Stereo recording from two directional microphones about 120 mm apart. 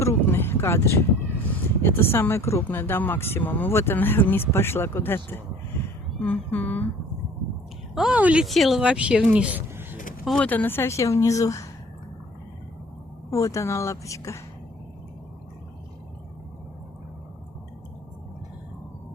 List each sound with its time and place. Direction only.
0.0 s a sound: 20° left (ahead or behind)
1.8 s speech: 20° left (ahead or behind)
7.9 s a woman's voice: 10° right (ahead or behind)
8.4 s speech: centre (ahead or behind); by 10.0 s 15° right (ahead or behind)
10.4 s speech: 15° left (ahead or behind)
13.3 s speech: 25° left (ahead or behind)